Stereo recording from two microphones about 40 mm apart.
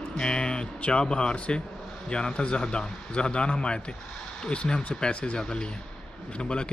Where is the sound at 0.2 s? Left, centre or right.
Left.